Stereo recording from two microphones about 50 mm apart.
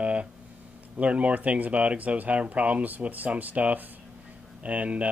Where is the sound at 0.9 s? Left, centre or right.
Right.